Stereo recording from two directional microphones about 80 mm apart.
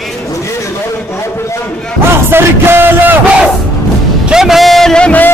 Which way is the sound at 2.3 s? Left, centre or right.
Right.